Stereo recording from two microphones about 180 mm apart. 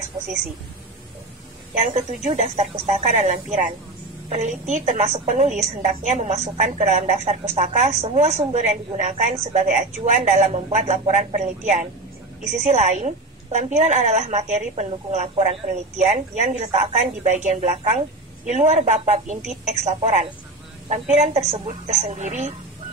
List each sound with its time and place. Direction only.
1.8 s a woman's voice: 40° right (ahead or behind)